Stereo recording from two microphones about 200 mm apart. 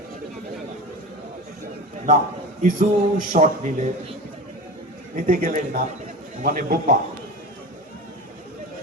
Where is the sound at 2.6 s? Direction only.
40° right (ahead or behind).